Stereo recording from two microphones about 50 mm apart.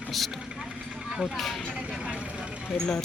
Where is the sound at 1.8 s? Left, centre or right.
Centre.